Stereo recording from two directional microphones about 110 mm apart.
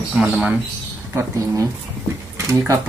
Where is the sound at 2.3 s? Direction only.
25° right (ahead or behind).